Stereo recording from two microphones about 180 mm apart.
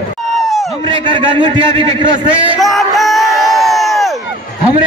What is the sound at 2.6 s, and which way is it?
Crowd, centre (ahead or behind).